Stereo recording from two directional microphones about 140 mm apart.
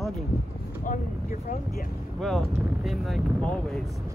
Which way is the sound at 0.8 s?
80° left.